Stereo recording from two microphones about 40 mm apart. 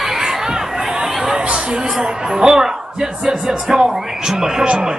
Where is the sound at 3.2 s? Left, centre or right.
Centre.